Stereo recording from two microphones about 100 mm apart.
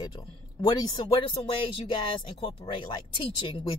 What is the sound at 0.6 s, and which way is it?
Speech, 50° left (ahead or behind).